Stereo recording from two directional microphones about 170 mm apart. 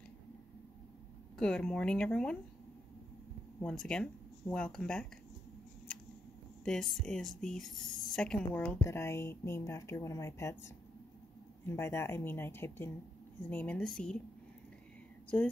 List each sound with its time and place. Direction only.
1.4 s speech: 5° left (ahead or behind)
3.6 s speech: 5° left (ahead or behind)
6.6 s speech: 5° left (ahead or behind)
15.2 s speech: 10° left (ahead or behind)